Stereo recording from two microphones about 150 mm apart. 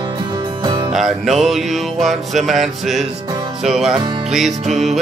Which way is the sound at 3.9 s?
30° right (ahead or behind).